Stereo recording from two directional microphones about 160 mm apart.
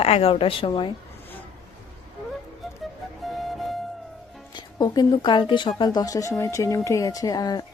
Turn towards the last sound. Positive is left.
turn(degrees=25)  # may be behind; listen again after turning